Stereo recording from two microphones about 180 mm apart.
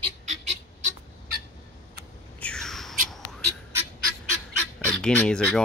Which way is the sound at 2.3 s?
5° left (ahead or behind).